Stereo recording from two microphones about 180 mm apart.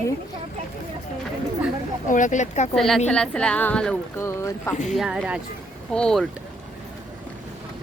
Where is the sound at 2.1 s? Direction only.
45° left (ahead or behind).